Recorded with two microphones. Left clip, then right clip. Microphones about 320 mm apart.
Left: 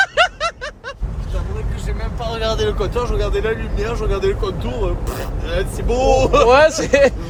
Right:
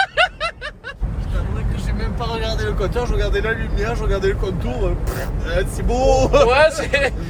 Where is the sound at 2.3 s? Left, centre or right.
Left.